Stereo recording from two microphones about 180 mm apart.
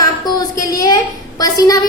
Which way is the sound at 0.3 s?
20° left (ahead or behind).